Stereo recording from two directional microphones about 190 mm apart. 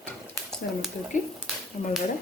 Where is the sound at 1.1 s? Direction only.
40° left (ahead or behind).